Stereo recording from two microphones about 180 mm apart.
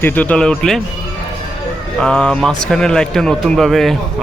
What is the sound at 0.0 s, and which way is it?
Speech, 10° left (ahead or behind).